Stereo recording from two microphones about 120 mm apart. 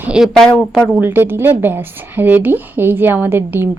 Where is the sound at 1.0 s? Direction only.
15° right (ahead or behind).